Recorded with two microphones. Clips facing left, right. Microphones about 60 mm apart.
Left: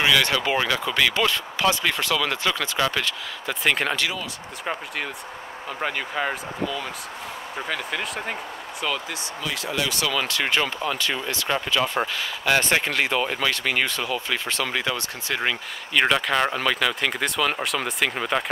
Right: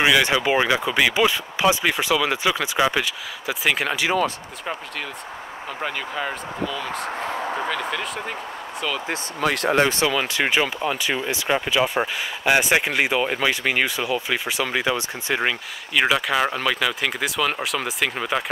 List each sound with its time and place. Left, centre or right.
0.0 s speech: centre
5.7 s speech: centre
9.4 s speech: right
9.8 s speech: right
10.1 s speech: centre
15.4 s speech: centre